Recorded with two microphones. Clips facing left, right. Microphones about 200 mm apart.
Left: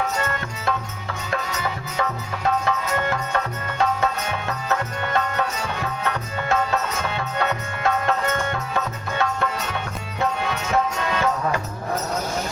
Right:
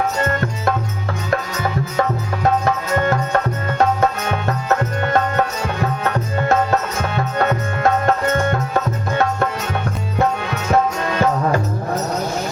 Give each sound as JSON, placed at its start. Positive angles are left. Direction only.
{"t": 0.2, "sound": "music", "side_deg": -45}
{"t": 2.0, "sound": "music", "side_deg": -45}
{"t": 7.2, "sound": "music", "side_deg": -45}